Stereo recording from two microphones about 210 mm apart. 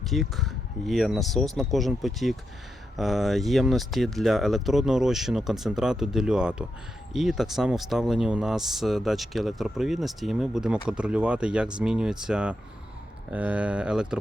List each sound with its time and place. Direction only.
0.0 s speech: centre (ahead or behind)